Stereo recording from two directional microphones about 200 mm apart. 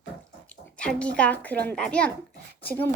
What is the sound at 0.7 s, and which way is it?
A child's voice, 5° left (ahead or behind).